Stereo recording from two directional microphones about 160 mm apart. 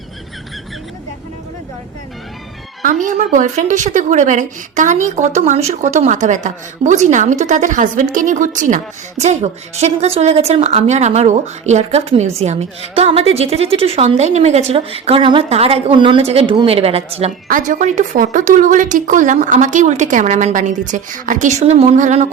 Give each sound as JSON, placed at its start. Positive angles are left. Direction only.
{"t": 2.8, "sound": "a woman's voice", "side_deg": -55}
{"t": 17.5, "sound": "a woman's voice", "side_deg": -50}